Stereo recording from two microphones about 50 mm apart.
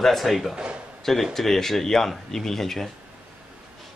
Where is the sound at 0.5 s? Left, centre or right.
Right.